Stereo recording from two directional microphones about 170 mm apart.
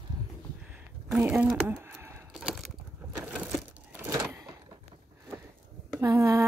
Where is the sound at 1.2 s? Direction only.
10° right (ahead or behind).